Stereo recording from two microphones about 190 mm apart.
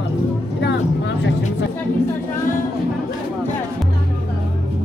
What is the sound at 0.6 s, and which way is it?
Music, 65° left (ahead or behind).